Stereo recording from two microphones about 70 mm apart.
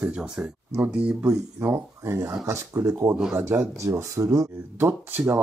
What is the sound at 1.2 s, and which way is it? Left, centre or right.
Speech, right.